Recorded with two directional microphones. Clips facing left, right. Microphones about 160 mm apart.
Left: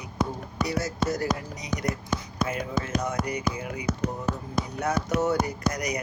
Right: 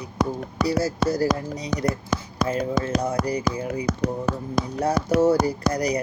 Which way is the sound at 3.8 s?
80° right.